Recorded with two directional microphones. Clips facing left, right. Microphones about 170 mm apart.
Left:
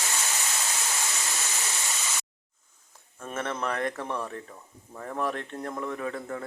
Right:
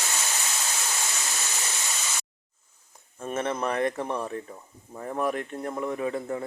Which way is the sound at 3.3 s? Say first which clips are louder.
Right 3 dB; 20° right (ahead or behind).